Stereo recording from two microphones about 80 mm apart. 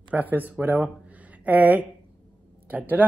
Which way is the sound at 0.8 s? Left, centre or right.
Centre.